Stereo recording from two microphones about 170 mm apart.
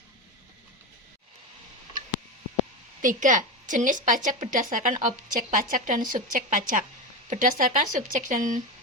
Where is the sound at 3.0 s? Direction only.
50° right (ahead or behind).